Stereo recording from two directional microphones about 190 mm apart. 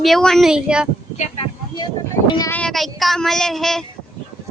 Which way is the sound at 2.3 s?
20° left (ahead or behind).